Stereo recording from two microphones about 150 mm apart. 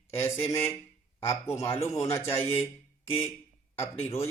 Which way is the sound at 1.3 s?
20° left (ahead or behind).